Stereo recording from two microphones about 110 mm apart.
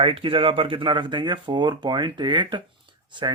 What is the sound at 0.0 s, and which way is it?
Speech, 55° right (ahead or behind).